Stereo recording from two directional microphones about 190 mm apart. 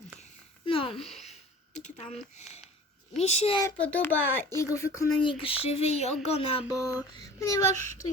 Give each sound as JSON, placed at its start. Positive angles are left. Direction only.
{"t": 0.2, "sound": "a sound", "side_deg": 30}
{"t": 0.9, "sound": "speech", "side_deg": 0}
{"t": 1.2, "sound": "a sound", "side_deg": 35}
{"t": 3.2, "sound": "speech", "side_deg": 35}
{"t": 3.8, "sound": "a child's voice", "side_deg": 10}
{"t": 7.2, "sound": "a child's voice", "side_deg": 15}